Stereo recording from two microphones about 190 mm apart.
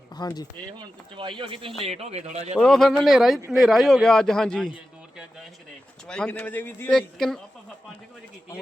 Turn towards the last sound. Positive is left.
turn(degrees=0)  # may be behind; listen again after turning